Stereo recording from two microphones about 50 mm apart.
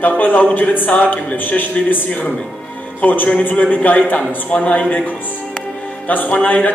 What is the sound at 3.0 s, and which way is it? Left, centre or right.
A man's voice, left.